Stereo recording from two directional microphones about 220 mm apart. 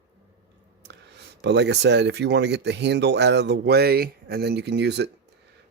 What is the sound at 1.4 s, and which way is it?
Speech, 50° right (ahead or behind).